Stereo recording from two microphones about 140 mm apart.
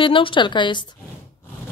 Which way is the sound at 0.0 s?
35° left (ahead or behind).